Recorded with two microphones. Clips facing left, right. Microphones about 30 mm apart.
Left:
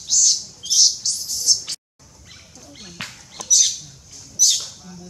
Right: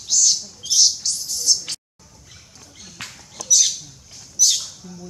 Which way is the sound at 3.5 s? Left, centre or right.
Centre.